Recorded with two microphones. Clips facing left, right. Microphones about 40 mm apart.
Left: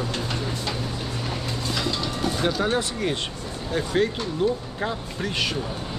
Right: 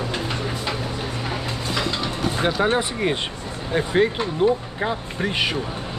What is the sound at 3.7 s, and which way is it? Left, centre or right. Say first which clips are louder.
Speech: right 4 dB; right.